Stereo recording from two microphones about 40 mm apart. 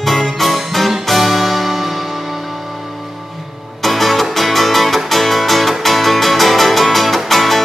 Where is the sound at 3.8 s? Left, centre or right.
Centre.